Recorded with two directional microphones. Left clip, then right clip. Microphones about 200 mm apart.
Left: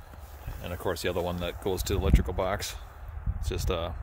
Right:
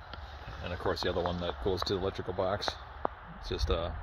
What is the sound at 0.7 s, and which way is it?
Speech, 20° left (ahead or behind).